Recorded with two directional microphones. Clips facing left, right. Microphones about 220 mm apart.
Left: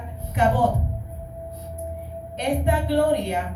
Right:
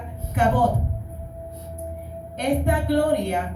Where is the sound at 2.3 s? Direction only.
50° right (ahead or behind).